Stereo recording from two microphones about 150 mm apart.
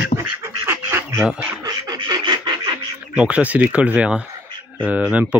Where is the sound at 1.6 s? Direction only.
30° right (ahead or behind).